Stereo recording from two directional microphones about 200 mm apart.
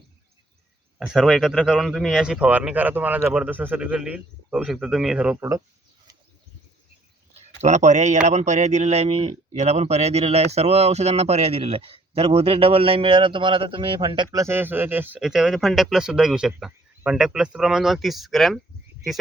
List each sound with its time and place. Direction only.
0.9 s speech: centre (ahead or behind)
7.6 s a man's voice: 35° right (ahead or behind); by 18.6 s centre (ahead or behind)